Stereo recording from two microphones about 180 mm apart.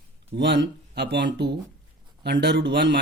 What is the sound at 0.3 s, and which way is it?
Speech, 80° right.